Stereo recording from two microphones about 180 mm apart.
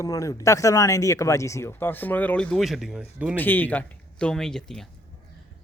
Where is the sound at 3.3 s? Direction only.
10° left (ahead or behind).